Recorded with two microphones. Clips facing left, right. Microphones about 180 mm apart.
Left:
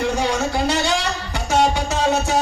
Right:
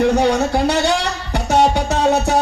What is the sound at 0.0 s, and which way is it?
Music, 60° right (ahead or behind).